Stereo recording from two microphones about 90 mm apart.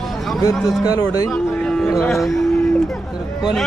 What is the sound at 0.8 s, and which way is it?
Speech, 45° left (ahead or behind).